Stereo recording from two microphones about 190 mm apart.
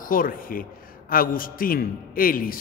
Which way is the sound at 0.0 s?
45° left (ahead or behind).